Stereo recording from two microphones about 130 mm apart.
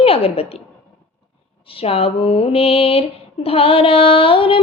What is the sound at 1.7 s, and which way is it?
Mantra, 50° left (ahead or behind).